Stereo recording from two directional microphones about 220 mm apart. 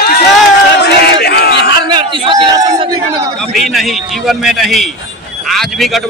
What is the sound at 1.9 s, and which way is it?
Speech, 20° right (ahead or behind).